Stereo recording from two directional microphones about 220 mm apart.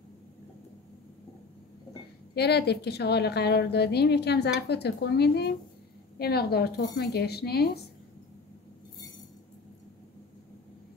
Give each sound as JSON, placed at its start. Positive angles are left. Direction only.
{"t": 2.3, "sound": "a woman's voice", "side_deg": 50}